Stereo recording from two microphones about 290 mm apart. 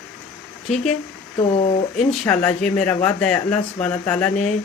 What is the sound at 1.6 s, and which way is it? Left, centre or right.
Speech, left.